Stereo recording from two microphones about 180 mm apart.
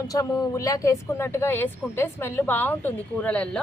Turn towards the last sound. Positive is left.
turn(degrees=5)  # may be behind; listen again after turning